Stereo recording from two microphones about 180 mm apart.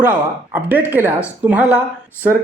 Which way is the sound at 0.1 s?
10° right (ahead or behind).